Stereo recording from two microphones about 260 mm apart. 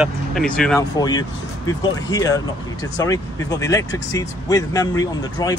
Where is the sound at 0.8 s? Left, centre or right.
Centre.